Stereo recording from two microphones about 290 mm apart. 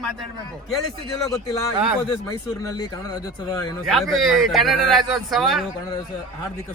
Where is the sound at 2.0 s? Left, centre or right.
Centre.